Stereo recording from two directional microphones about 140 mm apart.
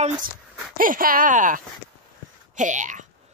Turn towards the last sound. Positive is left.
turn(degrees=-65)  # may be behind; listen again after turning